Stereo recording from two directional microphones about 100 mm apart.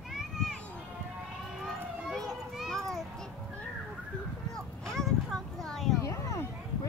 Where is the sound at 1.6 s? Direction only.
Centre (ahead or behind).